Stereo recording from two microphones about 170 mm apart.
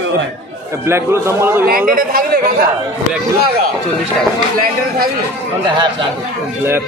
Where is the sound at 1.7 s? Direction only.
55° right (ahead or behind).